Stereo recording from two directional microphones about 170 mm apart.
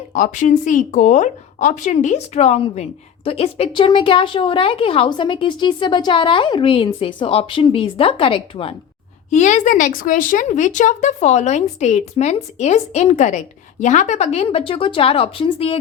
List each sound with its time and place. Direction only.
0.1 s a woman's voice: 45° left (ahead or behind); by 8.7 s 30° left (ahead or behind)
9.3 s a woman's voice: 45° left (ahead or behind)